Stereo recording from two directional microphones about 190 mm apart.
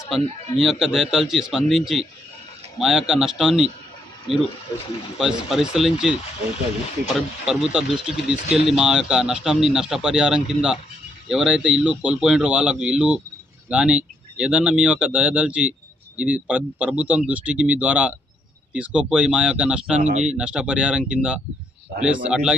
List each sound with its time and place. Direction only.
0.6 s speech: centre (ahead or behind)
5.1 s speech: centre (ahead or behind)
20.0 s speech: 40° right (ahead or behind)
20.2 s speech: 5° right (ahead or behind)